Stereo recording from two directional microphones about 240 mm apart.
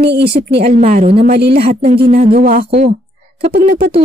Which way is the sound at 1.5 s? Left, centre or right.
Right.